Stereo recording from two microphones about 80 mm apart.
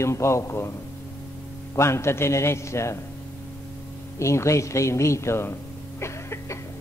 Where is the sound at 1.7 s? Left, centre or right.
Left.